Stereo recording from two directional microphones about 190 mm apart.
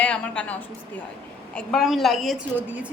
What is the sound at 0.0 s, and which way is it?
A woman's voice, 5° left (ahead or behind).